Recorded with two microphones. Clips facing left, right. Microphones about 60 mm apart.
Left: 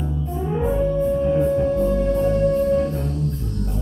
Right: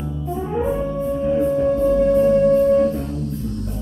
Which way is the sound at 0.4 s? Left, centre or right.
Centre.